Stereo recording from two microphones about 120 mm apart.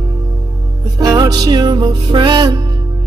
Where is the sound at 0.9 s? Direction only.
35° right (ahead or behind).